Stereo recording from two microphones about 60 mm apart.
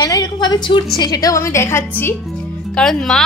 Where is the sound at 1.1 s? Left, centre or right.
Left.